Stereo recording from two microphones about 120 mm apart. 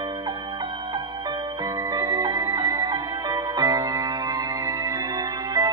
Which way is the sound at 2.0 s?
30° right (ahead or behind).